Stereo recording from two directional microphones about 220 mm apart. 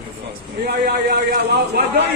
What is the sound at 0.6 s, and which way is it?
A man's voice, 45° right (ahead or behind).